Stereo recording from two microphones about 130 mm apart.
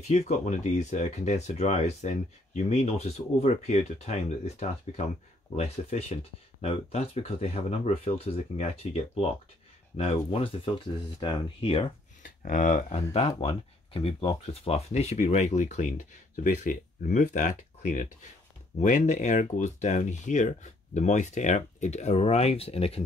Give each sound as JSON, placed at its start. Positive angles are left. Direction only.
{"t": 0.0, "sound": "speech", "side_deg": 60}
{"t": 12.2, "sound": "speech", "side_deg": 85}
{"t": 13.4, "sound": "speech", "side_deg": 50}
{"t": 16.4, "sound": "speech", "side_deg": 80}